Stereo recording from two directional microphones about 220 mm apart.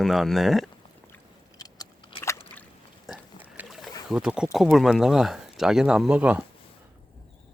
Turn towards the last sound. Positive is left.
turn(degrees=-5)  # may be behind; listen again after turning